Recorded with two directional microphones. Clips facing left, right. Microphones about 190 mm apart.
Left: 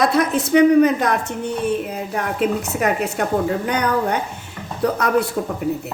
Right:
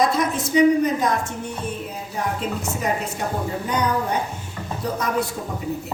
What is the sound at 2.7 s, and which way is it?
A woman's voice, 65° left (ahead or behind).